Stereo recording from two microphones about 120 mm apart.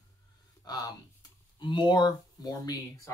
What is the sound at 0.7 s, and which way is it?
Speech, 35° left (ahead or behind).